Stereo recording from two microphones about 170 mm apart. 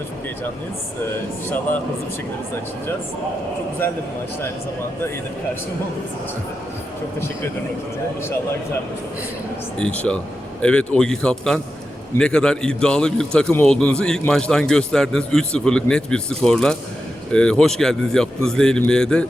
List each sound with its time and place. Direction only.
9.7 s a man's voice: 5° left (ahead or behind)